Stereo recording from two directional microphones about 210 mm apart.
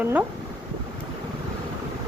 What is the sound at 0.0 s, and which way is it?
Speech, 10° right (ahead or behind).